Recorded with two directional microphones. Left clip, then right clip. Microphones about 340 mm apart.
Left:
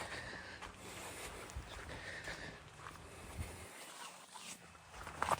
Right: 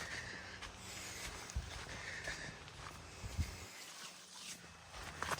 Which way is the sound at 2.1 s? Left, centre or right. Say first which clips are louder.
Right 2 dB; centre.